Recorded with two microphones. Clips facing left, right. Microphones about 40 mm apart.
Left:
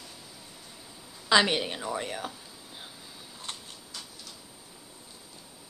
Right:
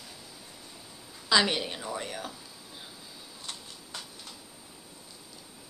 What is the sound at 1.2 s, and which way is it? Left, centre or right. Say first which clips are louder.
Speech: left 2 dB; centre.